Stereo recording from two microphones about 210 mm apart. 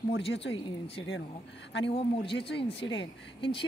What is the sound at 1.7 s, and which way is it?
Speech, 60° left (ahead or behind).